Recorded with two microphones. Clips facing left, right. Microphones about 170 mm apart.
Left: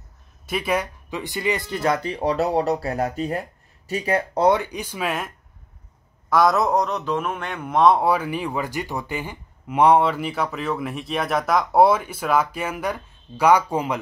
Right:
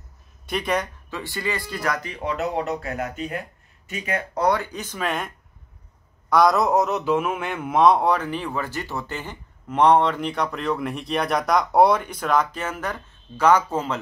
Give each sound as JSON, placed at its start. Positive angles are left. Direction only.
{"t": 0.5, "sound": "speech", "side_deg": 5}
{"t": 6.3, "sound": "a man's voice", "side_deg": 0}